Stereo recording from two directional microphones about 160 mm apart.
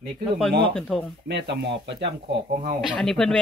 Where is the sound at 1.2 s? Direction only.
90° right.